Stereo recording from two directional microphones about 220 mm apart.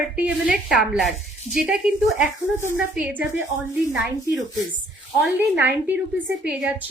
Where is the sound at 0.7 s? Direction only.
Centre (ahead or behind).